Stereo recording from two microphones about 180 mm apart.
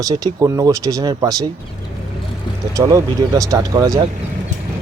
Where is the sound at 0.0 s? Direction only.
20° right (ahead or behind).